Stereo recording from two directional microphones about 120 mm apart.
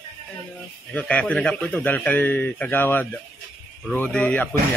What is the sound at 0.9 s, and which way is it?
A man's voice, 10° left (ahead or behind).